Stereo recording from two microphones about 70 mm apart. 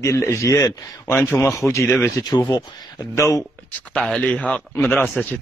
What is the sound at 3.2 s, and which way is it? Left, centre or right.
Speech, left.